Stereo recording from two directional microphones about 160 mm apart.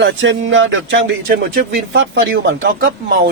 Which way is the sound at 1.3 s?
65° right (ahead or behind).